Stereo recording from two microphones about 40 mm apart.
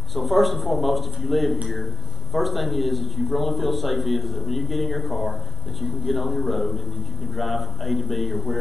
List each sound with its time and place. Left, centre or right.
0.1 s a man's voice: centre